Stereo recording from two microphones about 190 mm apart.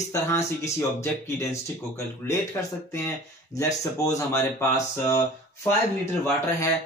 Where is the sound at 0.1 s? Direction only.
15° left (ahead or behind).